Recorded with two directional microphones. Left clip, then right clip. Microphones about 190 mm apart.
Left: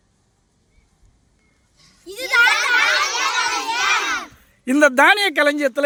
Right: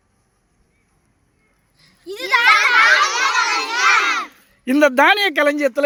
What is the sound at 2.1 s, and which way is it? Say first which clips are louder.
Children playing: right 2 dB; 50° left (ahead or behind).